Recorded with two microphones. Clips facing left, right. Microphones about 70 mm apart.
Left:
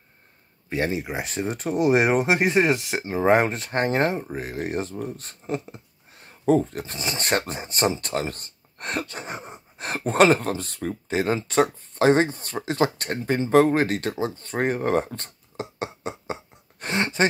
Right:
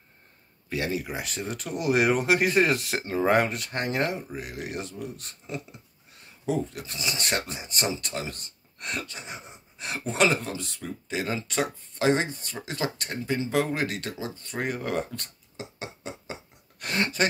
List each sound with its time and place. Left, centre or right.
0.7 s speech: left
16.8 s speech: left